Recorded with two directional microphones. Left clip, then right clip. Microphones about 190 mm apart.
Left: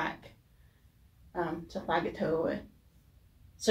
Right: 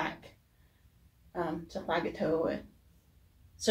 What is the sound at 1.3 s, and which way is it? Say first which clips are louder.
Speech: left 1 dB; 10° left (ahead or behind).